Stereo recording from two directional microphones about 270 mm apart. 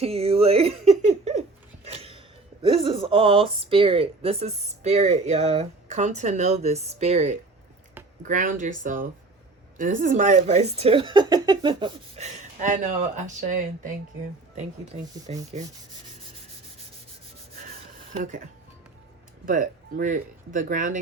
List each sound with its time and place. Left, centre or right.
0.0 s speech: right
15.3 s speech: right
18.1 s speech: right
19.5 s speech: right